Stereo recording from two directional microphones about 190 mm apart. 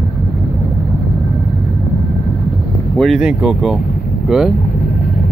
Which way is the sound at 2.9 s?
Centre (ahead or behind).